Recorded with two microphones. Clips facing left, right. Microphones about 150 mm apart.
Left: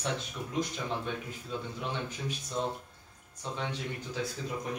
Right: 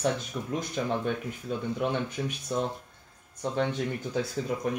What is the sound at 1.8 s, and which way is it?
Speech, 60° right (ahead or behind).